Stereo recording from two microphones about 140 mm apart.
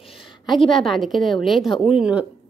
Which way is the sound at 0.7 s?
Centre (ahead or behind).